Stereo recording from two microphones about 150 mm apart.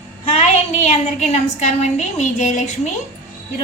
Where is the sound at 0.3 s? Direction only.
50° left (ahead or behind).